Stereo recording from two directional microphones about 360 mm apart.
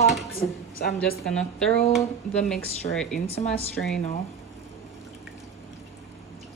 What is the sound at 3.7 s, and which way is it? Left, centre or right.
Speech, centre.